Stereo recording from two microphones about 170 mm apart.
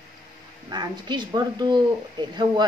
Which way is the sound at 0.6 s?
25° right (ahead or behind).